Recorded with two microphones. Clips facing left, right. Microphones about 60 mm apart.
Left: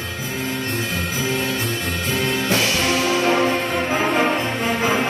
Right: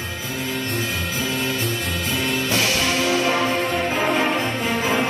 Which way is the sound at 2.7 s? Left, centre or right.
Left.